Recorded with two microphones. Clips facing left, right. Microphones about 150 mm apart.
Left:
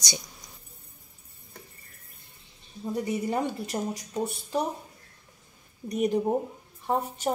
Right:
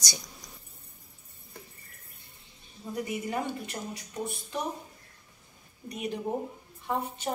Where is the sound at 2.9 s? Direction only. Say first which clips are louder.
Left 4 dB; 35° left (ahead or behind).